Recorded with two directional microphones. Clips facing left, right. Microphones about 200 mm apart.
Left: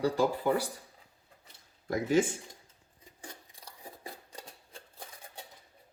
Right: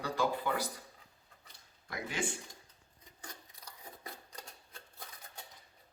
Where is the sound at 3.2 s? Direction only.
30° left (ahead or behind).